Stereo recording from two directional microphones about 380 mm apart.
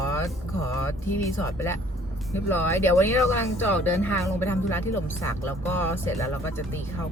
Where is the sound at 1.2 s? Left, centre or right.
Centre.